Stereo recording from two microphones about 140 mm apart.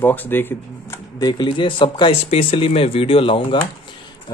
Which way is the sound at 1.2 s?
30° left (ahead or behind).